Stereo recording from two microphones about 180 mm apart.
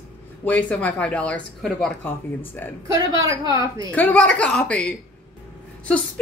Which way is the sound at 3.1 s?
20° right (ahead or behind).